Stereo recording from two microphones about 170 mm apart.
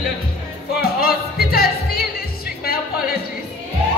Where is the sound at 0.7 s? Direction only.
65° left (ahead or behind).